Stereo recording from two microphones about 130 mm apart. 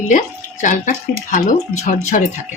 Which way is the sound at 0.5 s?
75° left (ahead or behind).